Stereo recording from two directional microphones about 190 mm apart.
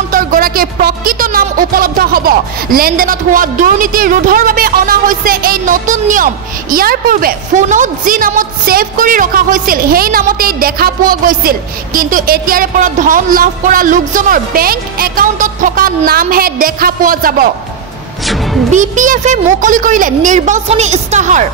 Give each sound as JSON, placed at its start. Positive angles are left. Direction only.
{"t": 0.1, "sound": "speech", "side_deg": -45}
{"t": 18.2, "sound": "music", "side_deg": 0}
{"t": 18.7, "sound": "a woman's voice", "side_deg": -40}